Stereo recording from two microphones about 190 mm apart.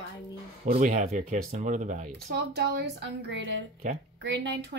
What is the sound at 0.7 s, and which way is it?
Speech, 45° right (ahead or behind).